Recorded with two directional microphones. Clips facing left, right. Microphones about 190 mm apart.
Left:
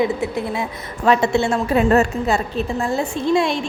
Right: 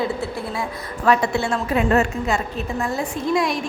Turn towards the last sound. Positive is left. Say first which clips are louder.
# left 3 dB
turn(degrees=25)  # may be behind; listen again after turning